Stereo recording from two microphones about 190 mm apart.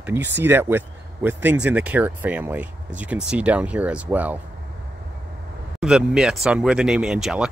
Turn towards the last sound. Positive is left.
turn(degrees=0)  # may be behind; listen again after turning